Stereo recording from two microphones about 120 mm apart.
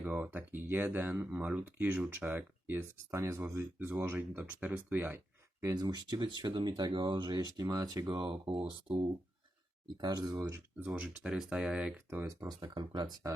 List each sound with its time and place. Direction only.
0.0 s speech: 15° right (ahead or behind); by 10.3 s 35° right (ahead or behind)
10.8 s speech: 15° right (ahead or behind)
12.6 s speech: 40° right (ahead or behind)